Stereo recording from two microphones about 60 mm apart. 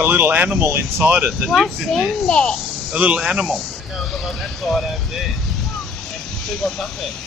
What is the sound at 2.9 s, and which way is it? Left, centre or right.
Speech, right.